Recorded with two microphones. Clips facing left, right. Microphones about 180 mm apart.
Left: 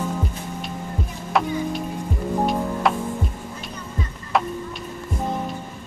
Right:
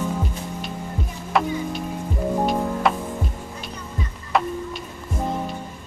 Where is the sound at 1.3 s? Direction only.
Centre (ahead or behind).